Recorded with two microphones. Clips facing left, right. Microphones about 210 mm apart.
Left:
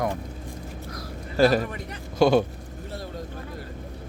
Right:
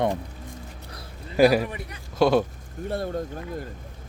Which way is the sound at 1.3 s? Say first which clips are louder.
Right 2 dB; 10° right (ahead or behind).